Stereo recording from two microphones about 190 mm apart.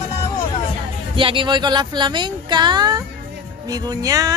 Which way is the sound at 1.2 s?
25° right (ahead or behind).